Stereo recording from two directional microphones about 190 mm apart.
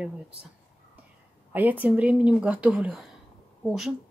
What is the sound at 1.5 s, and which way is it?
Speech, 10° right (ahead or behind).